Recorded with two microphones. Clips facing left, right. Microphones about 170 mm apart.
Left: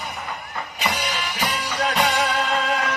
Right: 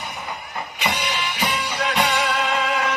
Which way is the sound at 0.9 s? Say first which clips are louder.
Right 1 dB; 40° left (ahead or behind).